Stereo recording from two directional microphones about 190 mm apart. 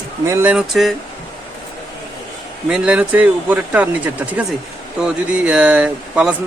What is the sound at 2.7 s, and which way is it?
Speech, 5° right (ahead or behind).